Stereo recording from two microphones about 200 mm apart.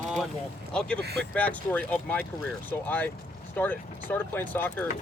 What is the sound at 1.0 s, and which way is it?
Speech, 55° right (ahead or behind).